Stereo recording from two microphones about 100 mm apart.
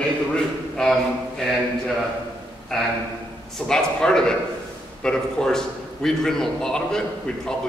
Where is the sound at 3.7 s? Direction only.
5° left (ahead or behind).